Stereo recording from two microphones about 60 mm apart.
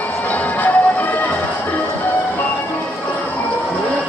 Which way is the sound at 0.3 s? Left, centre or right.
Left.